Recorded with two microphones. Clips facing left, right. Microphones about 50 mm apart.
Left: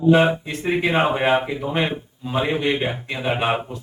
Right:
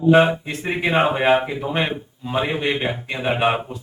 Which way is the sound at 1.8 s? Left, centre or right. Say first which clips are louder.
Even; centre.